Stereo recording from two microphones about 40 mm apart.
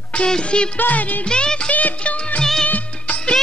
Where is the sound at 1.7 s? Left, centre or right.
Left.